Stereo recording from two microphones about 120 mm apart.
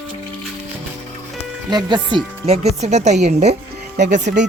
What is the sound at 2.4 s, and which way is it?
Speech, 65° right (ahead or behind).